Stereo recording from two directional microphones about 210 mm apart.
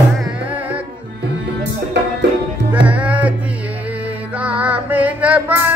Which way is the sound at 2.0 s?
55° right (ahead or behind).